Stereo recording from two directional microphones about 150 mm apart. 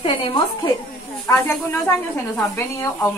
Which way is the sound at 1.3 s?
15° left (ahead or behind).